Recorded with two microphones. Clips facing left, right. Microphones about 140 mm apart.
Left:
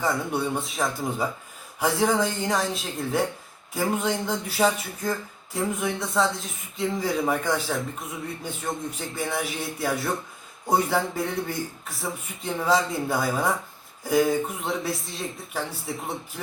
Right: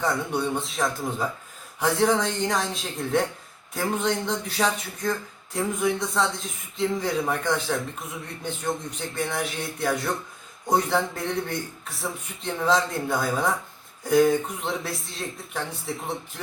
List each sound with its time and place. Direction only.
0.0 s speech: 5° left (ahead or behind)